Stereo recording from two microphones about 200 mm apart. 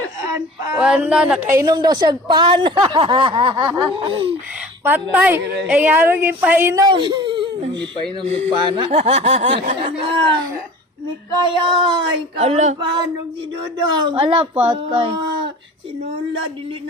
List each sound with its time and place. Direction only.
0.3 s speech: 15° right (ahead or behind)
1.5 s a woman's voice: 15° right (ahead or behind)
4.8 s a woman's voice: 10° right (ahead or behind); by 10.3 s 25° right (ahead or behind)
11.6 s a woman's voice: 25° right (ahead or behind)
14.1 s a woman's voice: 25° right (ahead or behind)